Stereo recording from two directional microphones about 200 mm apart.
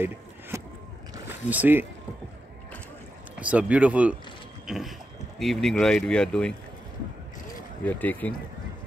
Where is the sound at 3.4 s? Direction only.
5° right (ahead or behind).